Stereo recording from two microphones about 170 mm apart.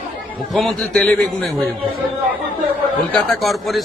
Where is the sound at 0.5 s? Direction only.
Centre (ahead or behind).